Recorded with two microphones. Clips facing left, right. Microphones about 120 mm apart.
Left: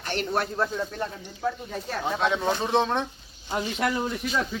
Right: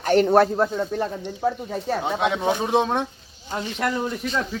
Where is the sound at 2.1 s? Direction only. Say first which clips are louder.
Right 1 dB; 10° right (ahead or behind).